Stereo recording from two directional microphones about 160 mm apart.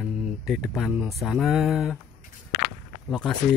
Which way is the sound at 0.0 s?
5° right (ahead or behind).